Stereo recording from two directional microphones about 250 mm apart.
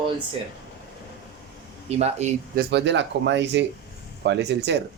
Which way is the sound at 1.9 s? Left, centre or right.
Right.